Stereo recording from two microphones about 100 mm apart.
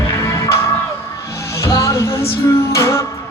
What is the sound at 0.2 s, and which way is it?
Music, 30° left (ahead or behind).